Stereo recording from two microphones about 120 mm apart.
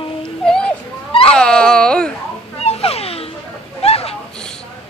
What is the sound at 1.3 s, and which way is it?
Dog, 5° left (ahead or behind).